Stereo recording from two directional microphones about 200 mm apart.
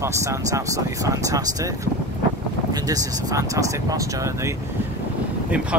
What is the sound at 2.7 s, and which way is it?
Speech, 20° right (ahead or behind).